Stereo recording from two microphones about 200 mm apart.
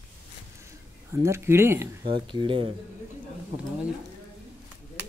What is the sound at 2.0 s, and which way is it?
Speech, 25° right (ahead or behind).